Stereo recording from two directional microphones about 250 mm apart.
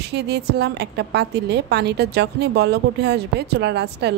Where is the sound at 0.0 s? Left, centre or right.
Right.